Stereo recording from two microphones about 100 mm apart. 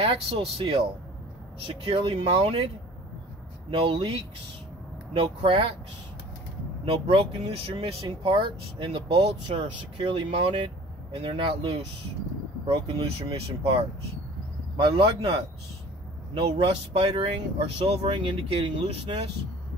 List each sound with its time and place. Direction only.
0.0 s speech: 75° right (ahead or behind)
3.7 s speech: 60° right (ahead or behind)
6.9 s speech: 70° right (ahead or behind)
14.8 s speech: 75° right (ahead or behind)
16.3 s speech: 65° right (ahead or behind)
18.5 s speech: 55° right (ahead or behind)